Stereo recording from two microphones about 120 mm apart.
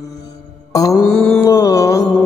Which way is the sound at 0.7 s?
30° left (ahead or behind).